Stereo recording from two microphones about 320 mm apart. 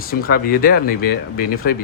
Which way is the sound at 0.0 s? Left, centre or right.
Left.